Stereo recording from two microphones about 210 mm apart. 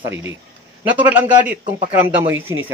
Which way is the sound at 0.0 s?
10° right (ahead or behind).